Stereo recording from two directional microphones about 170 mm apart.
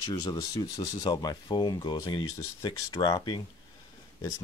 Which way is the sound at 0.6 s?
25° left (ahead or behind).